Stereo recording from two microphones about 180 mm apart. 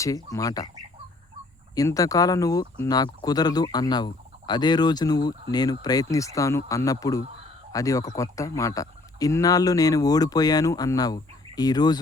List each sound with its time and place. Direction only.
0.0 s speech: 20° left (ahead or behind)
1.7 s speech: 20° left (ahead or behind)